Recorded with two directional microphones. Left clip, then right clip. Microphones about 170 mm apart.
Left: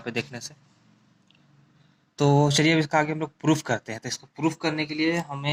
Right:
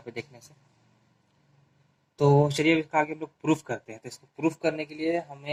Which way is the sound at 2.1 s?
35° left (ahead or behind).